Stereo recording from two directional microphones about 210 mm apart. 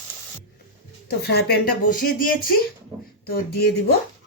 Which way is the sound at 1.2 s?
50° left (ahead or behind).